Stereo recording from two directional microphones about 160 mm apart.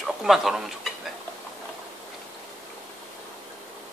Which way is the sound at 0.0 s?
Centre (ahead or behind).